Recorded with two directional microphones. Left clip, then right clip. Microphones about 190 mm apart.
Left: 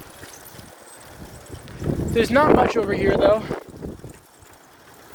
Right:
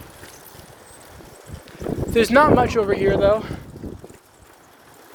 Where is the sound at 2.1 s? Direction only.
35° right (ahead or behind); by 3.5 s 20° right (ahead or behind).